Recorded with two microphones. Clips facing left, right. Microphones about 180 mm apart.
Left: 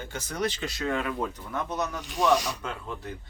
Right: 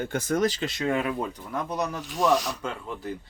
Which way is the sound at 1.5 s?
Centre (ahead or behind).